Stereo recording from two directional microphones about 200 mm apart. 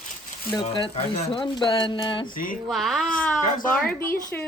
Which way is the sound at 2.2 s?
45° left (ahead or behind).